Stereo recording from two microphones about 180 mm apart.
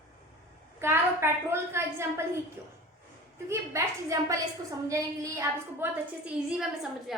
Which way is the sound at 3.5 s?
15° right (ahead or behind).